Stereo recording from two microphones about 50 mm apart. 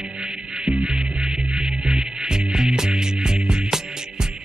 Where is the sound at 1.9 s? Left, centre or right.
Centre.